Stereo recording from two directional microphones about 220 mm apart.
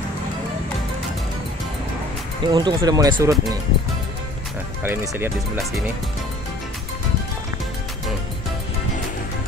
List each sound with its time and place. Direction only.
2.4 s speech: 20° right (ahead or behind)
4.8 s speech: 10° right (ahead or behind)